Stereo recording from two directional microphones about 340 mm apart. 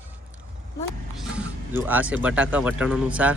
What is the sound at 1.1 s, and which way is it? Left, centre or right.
Speech, centre.